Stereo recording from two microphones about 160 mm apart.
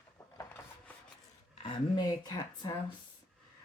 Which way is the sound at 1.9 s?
25° left (ahead or behind).